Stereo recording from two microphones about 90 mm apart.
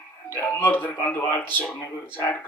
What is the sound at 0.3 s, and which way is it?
A man's voice, 20° left (ahead or behind).